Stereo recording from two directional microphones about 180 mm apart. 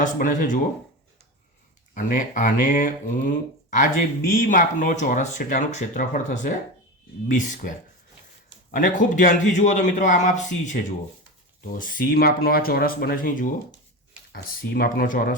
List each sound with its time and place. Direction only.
0.0 s speech: 45° left (ahead or behind)
2.0 s speech: 45° left (ahead or behind)
8.7 s speech: 45° left (ahead or behind)